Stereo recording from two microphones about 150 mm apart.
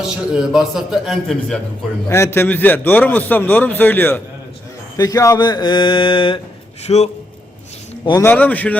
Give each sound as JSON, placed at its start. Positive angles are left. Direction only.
{"t": 0.0, "sound": "a man's voice", "side_deg": 0}
{"t": 2.0, "sound": "a man's voice", "side_deg": 20}
{"t": 4.9, "sound": "speech", "side_deg": 25}
{"t": 6.8, "sound": "a man's voice", "side_deg": 45}
{"t": 8.2, "sound": "a man's voice", "side_deg": 10}